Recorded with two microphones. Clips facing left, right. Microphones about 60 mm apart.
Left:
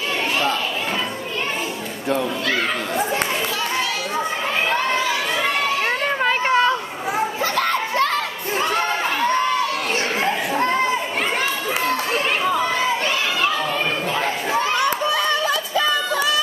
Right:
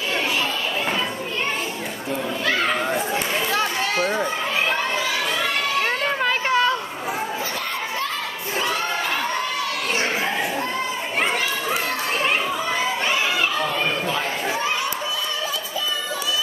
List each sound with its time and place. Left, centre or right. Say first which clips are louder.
6.0 s a sound: left 2 dB; centre
10.2 s children playing: left 4 dB; left
14.8 s crowd: left 6 dB; left